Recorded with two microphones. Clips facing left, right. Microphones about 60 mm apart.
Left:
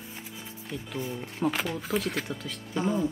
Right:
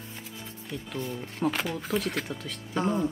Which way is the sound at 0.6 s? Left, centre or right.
Centre.